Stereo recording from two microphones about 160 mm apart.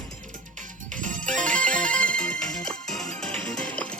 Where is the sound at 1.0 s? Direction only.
55° right (ahead or behind).